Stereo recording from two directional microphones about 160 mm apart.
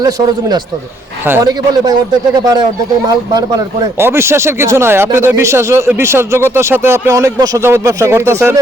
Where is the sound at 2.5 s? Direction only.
25° right (ahead or behind).